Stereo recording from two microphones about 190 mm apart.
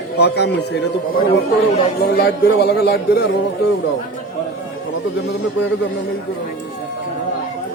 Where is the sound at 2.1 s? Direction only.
55° left (ahead or behind).